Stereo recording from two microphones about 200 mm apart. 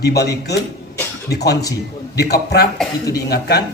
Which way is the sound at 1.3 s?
55° left (ahead or behind).